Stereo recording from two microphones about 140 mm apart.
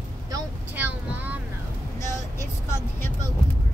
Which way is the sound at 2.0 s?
20° left (ahead or behind).